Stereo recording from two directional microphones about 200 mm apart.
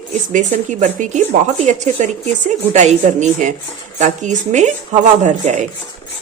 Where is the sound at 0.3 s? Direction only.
35° right (ahead or behind).